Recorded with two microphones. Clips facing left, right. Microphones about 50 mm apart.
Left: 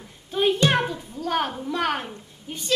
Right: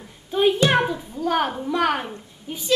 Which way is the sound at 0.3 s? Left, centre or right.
Centre.